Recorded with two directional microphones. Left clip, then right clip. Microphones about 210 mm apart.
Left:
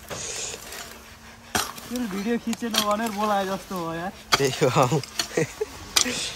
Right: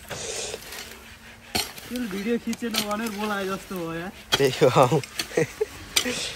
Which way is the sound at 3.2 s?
30° left (ahead or behind).